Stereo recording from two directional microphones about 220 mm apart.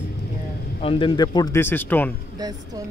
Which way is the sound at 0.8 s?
25° left (ahead or behind).